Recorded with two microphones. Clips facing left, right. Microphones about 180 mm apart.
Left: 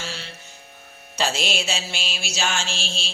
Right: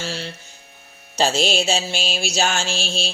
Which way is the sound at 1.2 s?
35° right (ahead or behind).